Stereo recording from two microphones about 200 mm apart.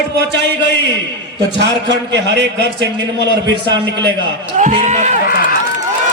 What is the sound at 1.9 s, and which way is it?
A man's voice, 60° right (ahead or behind).